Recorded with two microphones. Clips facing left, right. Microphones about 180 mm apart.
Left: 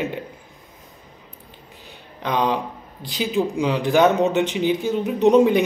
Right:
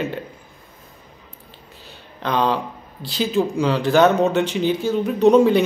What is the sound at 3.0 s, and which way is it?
Speech, 15° left (ahead or behind).